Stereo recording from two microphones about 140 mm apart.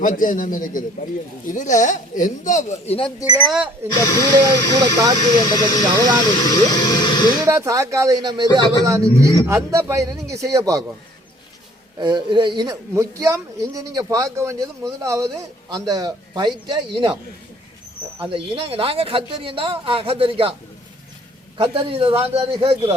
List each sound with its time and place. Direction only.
0.0 s a man's voice: 75° left (ahead or behind); by 3.1 s 45° left (ahead or behind)
3.4 s speech: 5° right (ahead or behind)
3.9 s speech: 25° left (ahead or behind)
7.4 s speech: 25° right (ahead or behind)
11.9 s speech: 30° right (ahead or behind)
12.9 s speech: 20° right (ahead or behind)
18.2 s speech: 40° right (ahead or behind)
21.6 s a man's voice: 40° right (ahead or behind)